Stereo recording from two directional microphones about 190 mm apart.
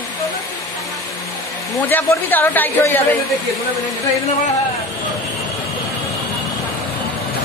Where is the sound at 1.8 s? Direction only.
10° left (ahead or behind).